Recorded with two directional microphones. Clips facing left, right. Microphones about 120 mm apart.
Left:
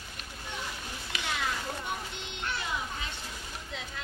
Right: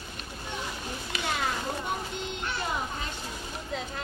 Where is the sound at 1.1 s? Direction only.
45° right (ahead or behind).